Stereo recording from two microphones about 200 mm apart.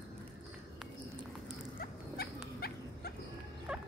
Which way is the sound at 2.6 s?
50° left (ahead or behind).